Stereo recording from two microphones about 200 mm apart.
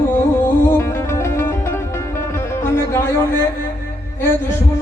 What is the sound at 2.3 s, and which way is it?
Speech, 10° left (ahead or behind).